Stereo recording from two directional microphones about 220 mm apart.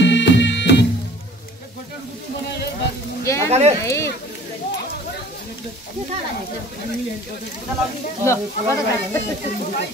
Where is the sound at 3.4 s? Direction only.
30° right (ahead or behind).